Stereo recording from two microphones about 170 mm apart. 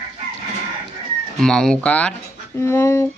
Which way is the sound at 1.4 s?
5° left (ahead or behind).